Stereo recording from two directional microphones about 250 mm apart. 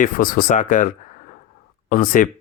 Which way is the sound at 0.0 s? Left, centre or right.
Left.